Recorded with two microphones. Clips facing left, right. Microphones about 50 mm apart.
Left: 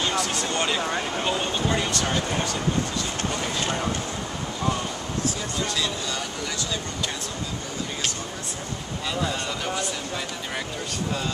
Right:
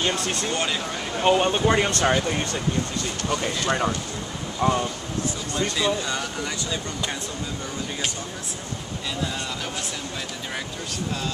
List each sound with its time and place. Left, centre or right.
0.2 s speech: right
0.5 s speech: centre
1.2 s speech: right
4.6 s speech: right